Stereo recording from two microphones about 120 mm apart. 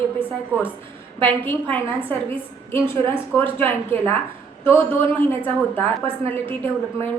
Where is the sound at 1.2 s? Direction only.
15° left (ahead or behind).